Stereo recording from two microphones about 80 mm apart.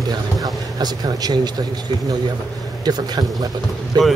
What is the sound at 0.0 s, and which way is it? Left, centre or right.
Vehicle, right.